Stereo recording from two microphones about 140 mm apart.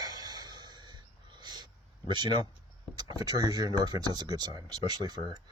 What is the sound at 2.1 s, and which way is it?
Speech, 35° right (ahead or behind).